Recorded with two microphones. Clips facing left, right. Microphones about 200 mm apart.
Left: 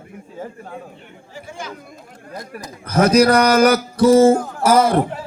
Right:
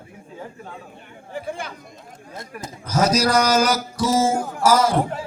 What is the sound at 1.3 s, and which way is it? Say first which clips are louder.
Chatter: right 3 dB; 60° right (ahead or behind).